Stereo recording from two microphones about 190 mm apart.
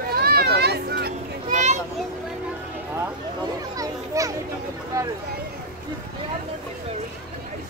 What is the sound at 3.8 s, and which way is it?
Children playing, 15° right (ahead or behind).